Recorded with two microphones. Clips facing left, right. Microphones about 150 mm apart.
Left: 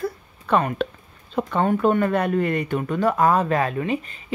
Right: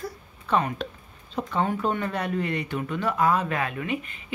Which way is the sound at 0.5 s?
55° left (ahead or behind).